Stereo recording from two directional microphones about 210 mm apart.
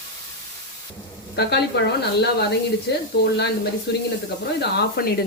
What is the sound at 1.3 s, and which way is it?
A woman's voice, 50° left (ahead or behind).